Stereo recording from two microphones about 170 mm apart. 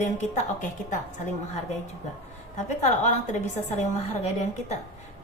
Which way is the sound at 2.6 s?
45° left (ahead or behind).